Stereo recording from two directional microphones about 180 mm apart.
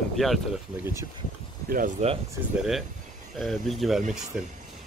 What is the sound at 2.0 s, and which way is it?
Speech, 40° right (ahead or behind).